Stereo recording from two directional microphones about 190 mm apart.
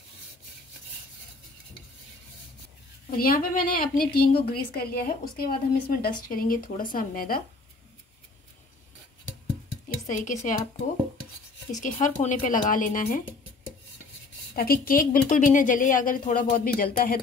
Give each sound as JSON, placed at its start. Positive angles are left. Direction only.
{"t": 3.1, "sound": "speech", "side_deg": 50}
{"t": 10.0, "sound": "speech", "side_deg": 40}
{"t": 11.7, "sound": "speech", "side_deg": 40}
{"t": 14.5, "sound": "speech", "side_deg": 50}